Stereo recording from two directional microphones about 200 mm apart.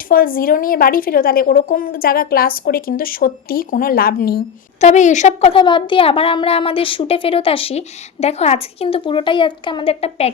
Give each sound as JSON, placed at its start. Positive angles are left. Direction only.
{"t": 0.1, "sound": "a woman's voice", "side_deg": 45}
{"t": 4.8, "sound": "a woman's voice", "side_deg": 35}